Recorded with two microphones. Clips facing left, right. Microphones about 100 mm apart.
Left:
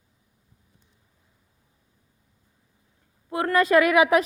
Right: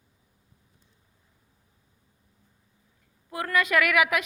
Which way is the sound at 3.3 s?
30° left (ahead or behind).